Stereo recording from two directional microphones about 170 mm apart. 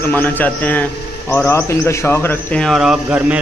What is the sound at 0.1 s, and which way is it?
A man's voice, 10° left (ahead or behind).